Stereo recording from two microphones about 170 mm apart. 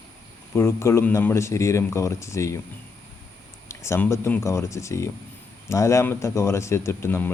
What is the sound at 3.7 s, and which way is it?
Speech, 15° left (ahead or behind).